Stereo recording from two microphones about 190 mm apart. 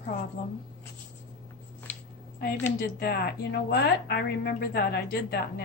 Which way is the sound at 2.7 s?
50° left (ahead or behind).